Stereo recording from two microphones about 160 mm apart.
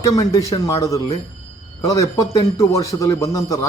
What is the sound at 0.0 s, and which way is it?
Speech, 20° left (ahead or behind).